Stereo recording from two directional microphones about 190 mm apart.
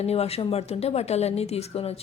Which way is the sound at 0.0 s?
35° left (ahead or behind).